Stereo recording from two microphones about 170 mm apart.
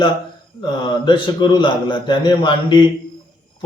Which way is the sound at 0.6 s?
30° left (ahead or behind).